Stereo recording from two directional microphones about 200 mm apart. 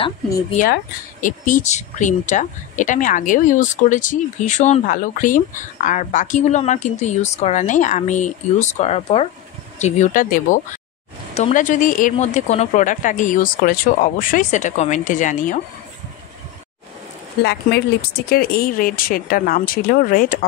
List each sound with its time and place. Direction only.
1.2 s speech: 40° left (ahead or behind)
17.4 s speech: 55° left (ahead or behind)